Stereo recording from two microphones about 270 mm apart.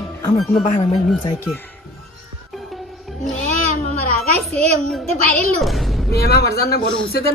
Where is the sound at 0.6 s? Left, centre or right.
Left.